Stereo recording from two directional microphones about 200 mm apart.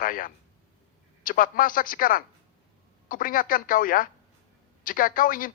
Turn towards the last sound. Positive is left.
turn(degrees=45)  # may be behind; listen again after turning